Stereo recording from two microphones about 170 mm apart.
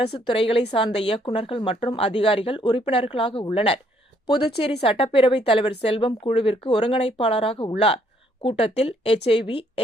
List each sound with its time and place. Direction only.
0.3 s speech: 30° left (ahead or behind)